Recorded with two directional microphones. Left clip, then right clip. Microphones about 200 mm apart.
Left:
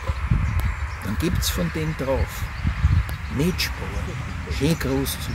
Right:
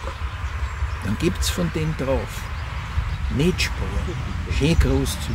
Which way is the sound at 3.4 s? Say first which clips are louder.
Right 2 dB; 10° right (ahead or behind).